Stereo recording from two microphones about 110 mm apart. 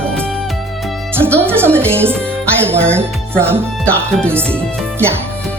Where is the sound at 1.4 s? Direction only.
20° right (ahead or behind).